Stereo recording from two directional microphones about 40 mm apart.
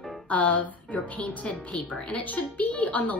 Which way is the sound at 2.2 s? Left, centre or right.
Left.